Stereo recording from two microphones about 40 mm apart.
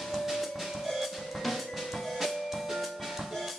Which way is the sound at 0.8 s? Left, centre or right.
Centre.